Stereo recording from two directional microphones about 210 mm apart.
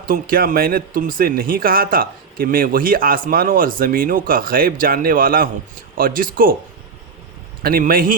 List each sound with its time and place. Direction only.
0.1 s speech: 45° right (ahead or behind)
7.6 s speech: 45° right (ahead or behind)